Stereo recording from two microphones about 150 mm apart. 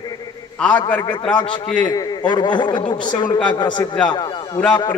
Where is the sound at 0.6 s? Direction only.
10° left (ahead or behind).